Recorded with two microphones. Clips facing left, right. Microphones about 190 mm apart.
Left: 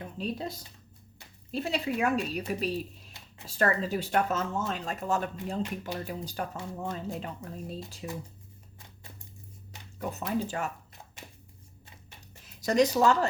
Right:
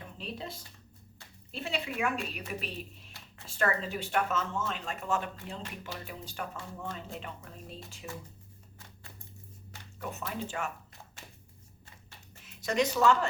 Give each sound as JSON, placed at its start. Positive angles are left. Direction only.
{"t": 0.2, "sound": "speech", "side_deg": 40}
{"t": 10.0, "sound": "speech", "side_deg": 35}
{"t": 11.2, "sound": "shuffling cards", "side_deg": 15}
{"t": 12.5, "sound": "speech", "side_deg": 40}